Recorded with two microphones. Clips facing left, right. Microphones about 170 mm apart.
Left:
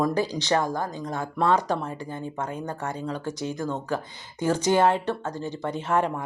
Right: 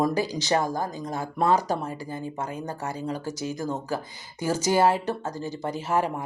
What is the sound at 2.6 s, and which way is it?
Speech, 35° right (ahead or behind).